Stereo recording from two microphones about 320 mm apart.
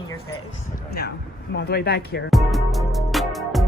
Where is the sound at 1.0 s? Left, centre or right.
Left.